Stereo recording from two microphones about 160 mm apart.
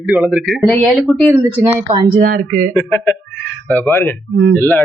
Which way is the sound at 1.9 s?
30° right (ahead or behind).